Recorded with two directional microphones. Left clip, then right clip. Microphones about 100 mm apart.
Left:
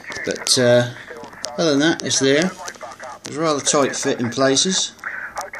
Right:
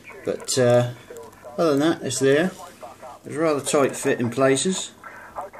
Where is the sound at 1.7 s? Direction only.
75° left (ahead or behind).